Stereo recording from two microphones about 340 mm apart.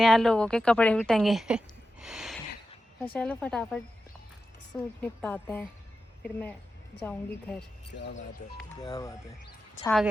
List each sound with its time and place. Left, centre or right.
0.0 s a woman's voice: centre
7.0 s speech: centre
7.9 s speech: left
8.7 s speech: centre